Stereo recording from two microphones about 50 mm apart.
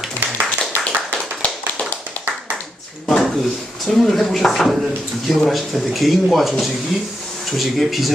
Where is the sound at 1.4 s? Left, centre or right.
Left.